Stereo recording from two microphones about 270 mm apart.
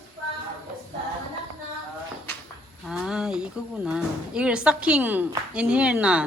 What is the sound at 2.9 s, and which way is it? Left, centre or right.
A woman's voice, centre.